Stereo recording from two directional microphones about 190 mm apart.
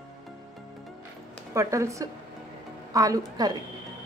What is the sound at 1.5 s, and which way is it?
A woman's voice, 15° right (ahead or behind).